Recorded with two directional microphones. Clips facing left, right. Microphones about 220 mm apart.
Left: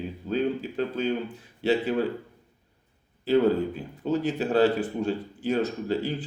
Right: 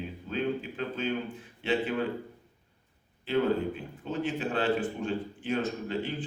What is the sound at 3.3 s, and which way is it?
A man's voice, 40° left (ahead or behind).